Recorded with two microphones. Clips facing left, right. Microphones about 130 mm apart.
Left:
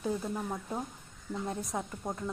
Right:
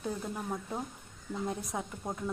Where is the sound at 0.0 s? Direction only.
Centre (ahead or behind).